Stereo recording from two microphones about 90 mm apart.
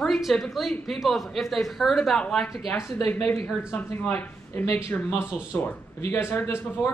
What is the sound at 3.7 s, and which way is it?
A man's voice, 20° left (ahead or behind).